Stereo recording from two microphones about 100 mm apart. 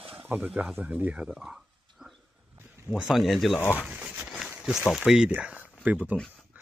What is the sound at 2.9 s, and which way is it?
Speech, centre (ahead or behind).